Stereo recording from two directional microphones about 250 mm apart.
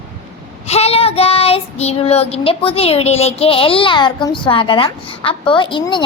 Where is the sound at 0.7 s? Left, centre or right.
Left.